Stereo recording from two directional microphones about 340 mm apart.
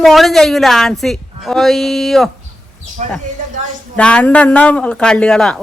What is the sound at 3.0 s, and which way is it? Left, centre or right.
Speech, right.